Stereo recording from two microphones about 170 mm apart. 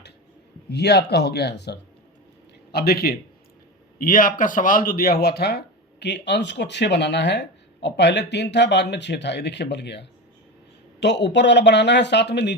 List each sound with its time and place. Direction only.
0.7 s speech: 75° left (ahead or behind)
2.7 s a man's voice: 65° left (ahead or behind); by 12.5 s 90° left